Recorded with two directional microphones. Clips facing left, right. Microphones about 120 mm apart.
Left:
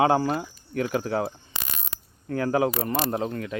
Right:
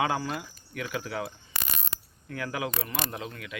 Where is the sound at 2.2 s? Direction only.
35° left (ahead or behind).